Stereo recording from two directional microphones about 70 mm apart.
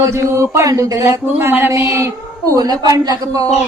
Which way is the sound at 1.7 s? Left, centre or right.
Right.